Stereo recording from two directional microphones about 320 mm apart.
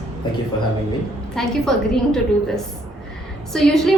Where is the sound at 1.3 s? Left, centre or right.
Centre.